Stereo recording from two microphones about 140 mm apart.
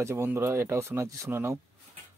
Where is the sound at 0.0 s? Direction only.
20° right (ahead or behind).